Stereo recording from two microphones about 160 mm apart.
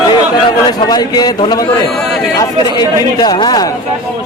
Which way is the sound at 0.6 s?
25° left (ahead or behind).